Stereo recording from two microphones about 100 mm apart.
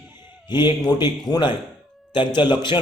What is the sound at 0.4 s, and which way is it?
A man's voice, 45° left (ahead or behind).